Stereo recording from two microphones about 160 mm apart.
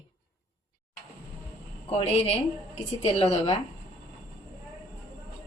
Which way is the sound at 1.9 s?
40° left (ahead or behind).